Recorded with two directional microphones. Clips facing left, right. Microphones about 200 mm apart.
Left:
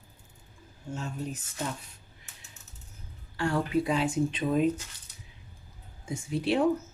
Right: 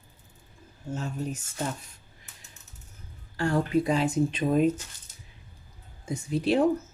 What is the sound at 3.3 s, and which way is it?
Speech, 40° right (ahead or behind).